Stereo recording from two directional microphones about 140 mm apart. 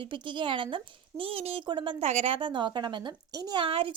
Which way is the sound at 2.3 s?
35° right (ahead or behind).